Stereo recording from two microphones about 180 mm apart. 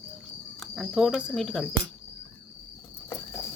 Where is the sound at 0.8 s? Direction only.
5° right (ahead or behind).